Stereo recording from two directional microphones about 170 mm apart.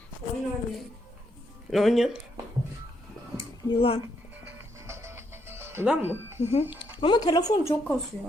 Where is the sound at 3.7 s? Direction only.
35° left (ahead or behind).